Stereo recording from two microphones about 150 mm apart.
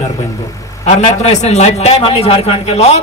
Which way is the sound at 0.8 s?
50° left (ahead or behind).